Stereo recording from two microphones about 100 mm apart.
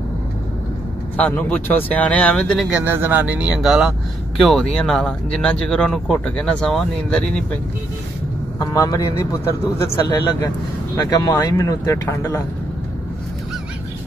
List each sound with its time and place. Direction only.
1.1 s speech: 15° left (ahead or behind)
2.7 s speech: 20° right (ahead or behind); by 7.4 s 10° left (ahead or behind)
8.5 s speech: 35° left (ahead or behind)
9.9 s speech: 40° left (ahead or behind)